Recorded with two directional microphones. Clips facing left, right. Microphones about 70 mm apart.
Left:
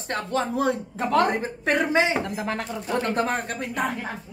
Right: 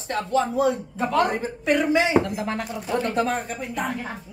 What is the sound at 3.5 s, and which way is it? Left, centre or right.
Speech, left.